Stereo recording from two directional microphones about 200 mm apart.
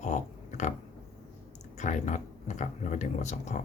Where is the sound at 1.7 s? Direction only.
35° left (ahead or behind).